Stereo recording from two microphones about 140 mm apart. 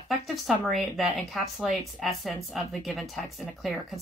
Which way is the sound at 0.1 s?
Centre (ahead or behind).